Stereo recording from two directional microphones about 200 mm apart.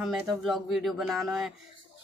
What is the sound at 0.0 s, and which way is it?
A woman's voice, centre (ahead or behind).